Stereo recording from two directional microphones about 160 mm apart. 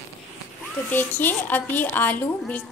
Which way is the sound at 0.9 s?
10° left (ahead or behind).